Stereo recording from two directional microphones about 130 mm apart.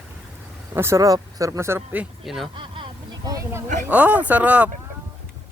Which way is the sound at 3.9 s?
10° right (ahead or behind).